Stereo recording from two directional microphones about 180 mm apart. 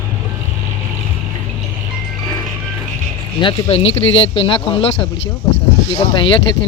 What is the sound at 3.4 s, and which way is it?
Speech, 30° left (ahead or behind).